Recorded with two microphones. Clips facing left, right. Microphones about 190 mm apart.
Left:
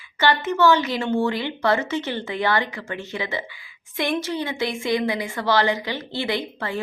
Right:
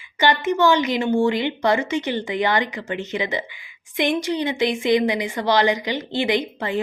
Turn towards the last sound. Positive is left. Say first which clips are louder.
# right 4 dB
turn(degrees=-15)  # may be behind; listen again after turning